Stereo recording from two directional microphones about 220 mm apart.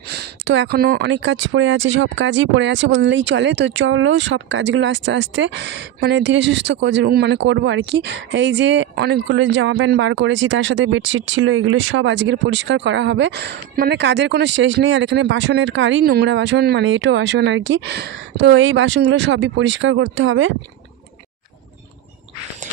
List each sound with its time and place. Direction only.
0.1 s speech: 50° right (ahead or behind)